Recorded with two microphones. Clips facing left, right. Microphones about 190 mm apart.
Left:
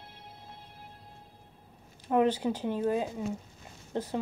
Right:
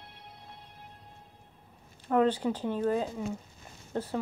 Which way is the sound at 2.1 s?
15° left (ahead or behind).